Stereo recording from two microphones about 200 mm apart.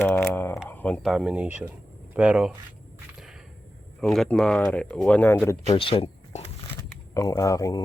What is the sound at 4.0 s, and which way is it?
Speech, centre (ahead or behind).